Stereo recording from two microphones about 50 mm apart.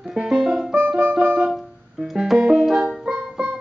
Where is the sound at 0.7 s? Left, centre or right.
Right.